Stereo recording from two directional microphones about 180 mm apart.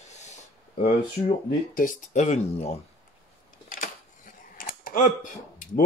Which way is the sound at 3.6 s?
45° left (ahead or behind).